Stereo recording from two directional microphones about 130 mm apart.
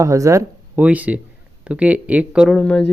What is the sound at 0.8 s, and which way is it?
Speech, 10° right (ahead or behind).